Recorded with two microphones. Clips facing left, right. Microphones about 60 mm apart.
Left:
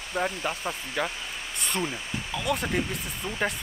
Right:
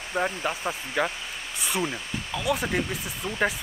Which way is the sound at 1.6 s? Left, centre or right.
Centre.